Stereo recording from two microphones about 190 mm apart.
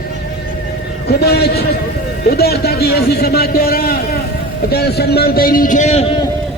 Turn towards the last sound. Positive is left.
turn(degrees=35)  # may be behind; listen again after turning